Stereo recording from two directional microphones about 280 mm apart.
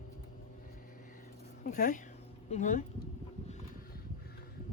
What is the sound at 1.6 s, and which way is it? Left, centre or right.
Speech, left.